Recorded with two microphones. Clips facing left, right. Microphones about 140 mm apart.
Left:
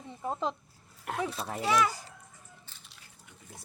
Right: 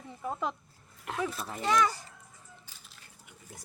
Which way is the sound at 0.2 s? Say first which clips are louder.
Left 1 dB; 30° left (ahead or behind).